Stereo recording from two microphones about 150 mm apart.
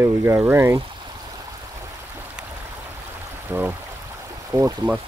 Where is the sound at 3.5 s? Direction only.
15° right (ahead or behind).